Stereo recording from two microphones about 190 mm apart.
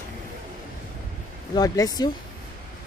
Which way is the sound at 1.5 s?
20° left (ahead or behind).